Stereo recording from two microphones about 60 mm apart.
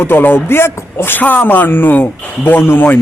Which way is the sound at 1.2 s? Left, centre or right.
Left.